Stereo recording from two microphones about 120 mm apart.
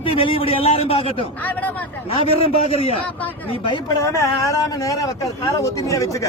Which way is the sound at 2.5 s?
55° left (ahead or behind).